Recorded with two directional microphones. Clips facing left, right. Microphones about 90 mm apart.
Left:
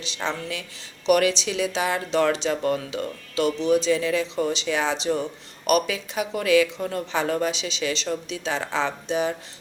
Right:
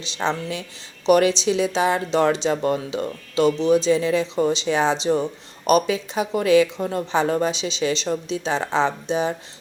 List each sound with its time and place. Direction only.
0.0 s speech: 25° right (ahead or behind)